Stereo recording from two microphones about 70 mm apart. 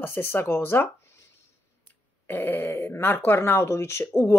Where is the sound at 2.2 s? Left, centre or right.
Left.